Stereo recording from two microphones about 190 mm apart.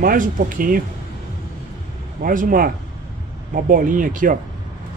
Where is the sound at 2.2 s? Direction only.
45° right (ahead or behind).